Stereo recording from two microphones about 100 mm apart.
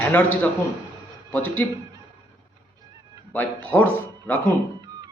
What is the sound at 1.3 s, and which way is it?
Speech, 20° left (ahead or behind).